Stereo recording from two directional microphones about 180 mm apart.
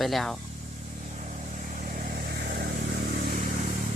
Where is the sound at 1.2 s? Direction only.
45° right (ahead or behind); by 2.6 s 60° right (ahead or behind).